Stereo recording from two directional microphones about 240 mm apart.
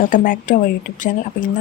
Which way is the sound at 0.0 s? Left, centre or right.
Left.